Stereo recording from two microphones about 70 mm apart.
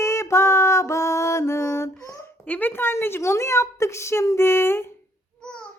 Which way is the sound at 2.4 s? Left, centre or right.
Left.